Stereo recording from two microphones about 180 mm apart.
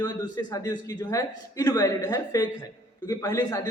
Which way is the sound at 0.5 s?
20° left (ahead or behind).